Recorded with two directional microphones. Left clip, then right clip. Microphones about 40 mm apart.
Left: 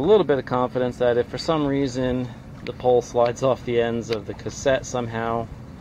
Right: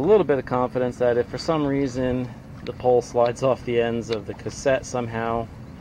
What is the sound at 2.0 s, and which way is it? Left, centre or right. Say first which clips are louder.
Speech: even; centre.